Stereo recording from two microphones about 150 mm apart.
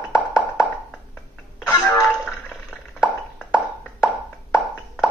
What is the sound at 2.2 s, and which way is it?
Plop, 5° left (ahead or behind).